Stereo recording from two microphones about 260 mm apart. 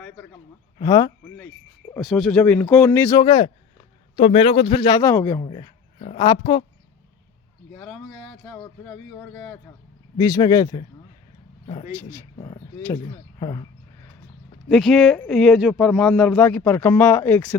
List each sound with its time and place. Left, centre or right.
0.8 s a man's voice: centre
1.9 s a man's voice: centre
7.8 s speech: centre
11.9 s speech: centre
14.7 s speech: centre